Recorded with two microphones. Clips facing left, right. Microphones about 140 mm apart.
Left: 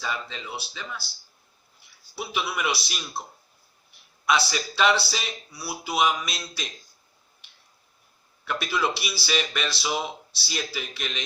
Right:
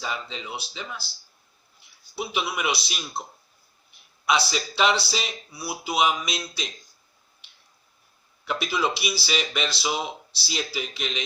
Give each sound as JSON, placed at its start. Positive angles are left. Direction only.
{"t": 0.0, "sound": "speech", "side_deg": -15}
{"t": 2.1, "sound": "speech", "side_deg": -15}
{"t": 4.3, "sound": "speech", "side_deg": -15}
{"t": 8.4, "sound": "speech", "side_deg": -15}